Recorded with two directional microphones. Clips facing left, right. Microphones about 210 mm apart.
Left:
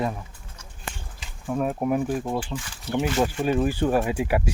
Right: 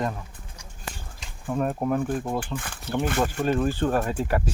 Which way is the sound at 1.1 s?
Centre (ahead or behind).